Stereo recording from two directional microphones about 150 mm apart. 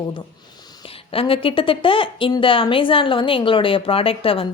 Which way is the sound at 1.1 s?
35° left (ahead or behind).